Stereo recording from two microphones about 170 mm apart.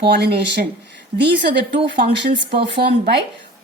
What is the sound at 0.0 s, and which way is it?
Speech, 75° right (ahead or behind).